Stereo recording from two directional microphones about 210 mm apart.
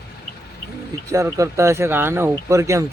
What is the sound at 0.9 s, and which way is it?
Speech, 15° right (ahead or behind).